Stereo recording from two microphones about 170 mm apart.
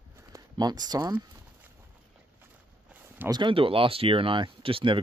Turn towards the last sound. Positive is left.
turn(degrees=-30)  # may be behind; listen again after turning